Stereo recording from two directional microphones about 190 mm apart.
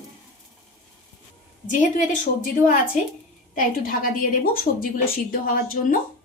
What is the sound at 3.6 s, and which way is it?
A woman's voice, 45° left (ahead or behind).